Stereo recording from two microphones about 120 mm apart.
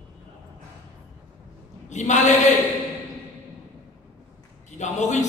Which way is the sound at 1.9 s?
80° left.